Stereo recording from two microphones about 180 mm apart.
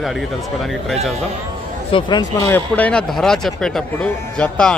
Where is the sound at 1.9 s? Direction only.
25° left (ahead or behind).